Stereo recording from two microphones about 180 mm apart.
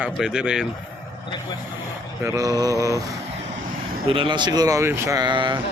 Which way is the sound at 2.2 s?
20° right (ahead or behind).